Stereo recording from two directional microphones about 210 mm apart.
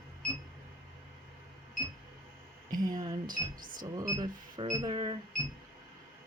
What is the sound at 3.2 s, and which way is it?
Speech, 40° right (ahead or behind).